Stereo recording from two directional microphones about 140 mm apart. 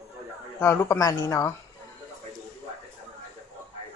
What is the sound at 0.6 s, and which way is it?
Speech, 20° left (ahead or behind).